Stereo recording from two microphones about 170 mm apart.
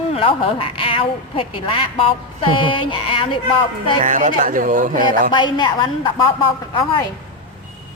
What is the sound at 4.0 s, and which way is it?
Speech, 45° right (ahead or behind).